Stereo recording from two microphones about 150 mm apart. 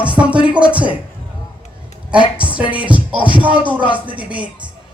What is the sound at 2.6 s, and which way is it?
Music, 35° left (ahead or behind).